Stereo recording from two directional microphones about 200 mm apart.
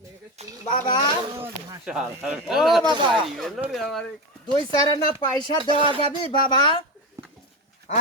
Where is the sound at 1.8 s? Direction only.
5° right (ahead or behind).